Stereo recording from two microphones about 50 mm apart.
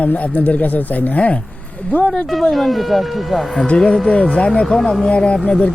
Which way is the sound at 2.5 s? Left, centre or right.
Centre.